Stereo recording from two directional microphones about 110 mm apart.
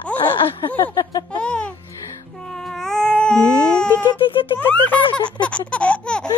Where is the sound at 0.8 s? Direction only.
40° left (ahead or behind).